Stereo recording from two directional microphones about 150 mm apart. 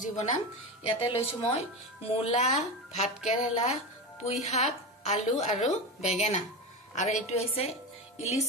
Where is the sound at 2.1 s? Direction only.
45° left (ahead or behind).